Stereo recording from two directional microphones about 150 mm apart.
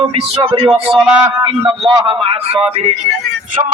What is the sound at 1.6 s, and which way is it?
Speech, 30° right (ahead or behind).